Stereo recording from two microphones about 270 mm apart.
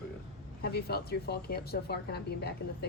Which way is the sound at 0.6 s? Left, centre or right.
Left.